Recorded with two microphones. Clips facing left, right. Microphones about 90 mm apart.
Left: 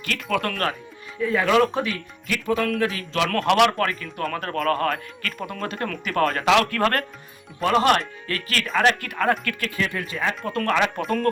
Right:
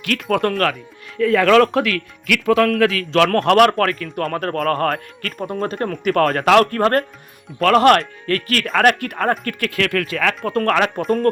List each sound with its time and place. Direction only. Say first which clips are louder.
0.0 s speech: right 6 dB; 60° right (ahead or behind)
1.2 s speech: right 6 dB; 90° right; by 6.1 s 35° right (ahead or behind)
6.1 s speech: right 5 dB; 50° right (ahead or behind)
7.6 s speech: right 6 dB; 65° right (ahead or behind); by 9.6 s 45° right (ahead or behind)
9.6 s speech: right 8 dB; 85° right
10.4 s speech: right 4 dB; 50° right (ahead or behind)